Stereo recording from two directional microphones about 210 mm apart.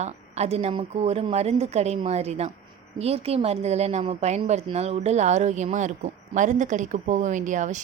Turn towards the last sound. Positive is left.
turn(degrees=-35)  # may be behind; listen again after turning